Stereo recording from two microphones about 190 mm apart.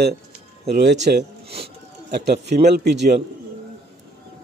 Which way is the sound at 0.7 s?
60° right (ahead or behind).